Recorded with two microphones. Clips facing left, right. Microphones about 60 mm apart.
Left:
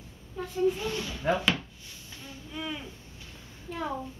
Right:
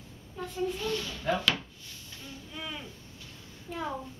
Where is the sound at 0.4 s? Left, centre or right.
Centre.